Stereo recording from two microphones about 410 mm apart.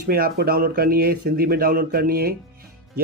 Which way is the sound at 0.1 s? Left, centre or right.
Right.